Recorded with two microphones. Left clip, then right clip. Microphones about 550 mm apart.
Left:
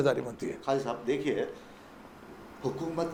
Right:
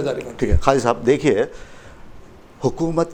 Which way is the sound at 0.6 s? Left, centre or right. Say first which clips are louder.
Right 14 dB; right.